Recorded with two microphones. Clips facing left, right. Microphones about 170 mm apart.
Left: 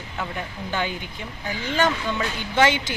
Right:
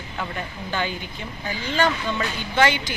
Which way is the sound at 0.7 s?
15° left (ahead or behind).